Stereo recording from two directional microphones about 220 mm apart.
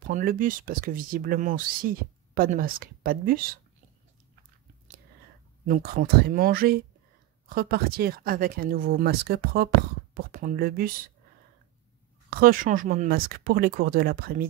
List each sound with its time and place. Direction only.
0.0 s speech: 40° right (ahead or behind)
5.7 s speech: 40° right (ahead or behind)
12.3 s speech: 40° right (ahead or behind)